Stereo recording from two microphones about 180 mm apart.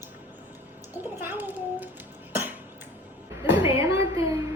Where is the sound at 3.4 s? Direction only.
30° left (ahead or behind).